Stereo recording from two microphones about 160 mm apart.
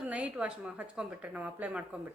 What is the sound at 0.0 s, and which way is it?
A woman's voice, 10° right (ahead or behind).